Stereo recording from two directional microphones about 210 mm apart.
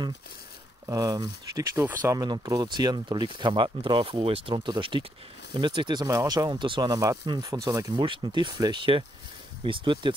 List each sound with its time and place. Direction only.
0.8 s speech: 15° right (ahead or behind)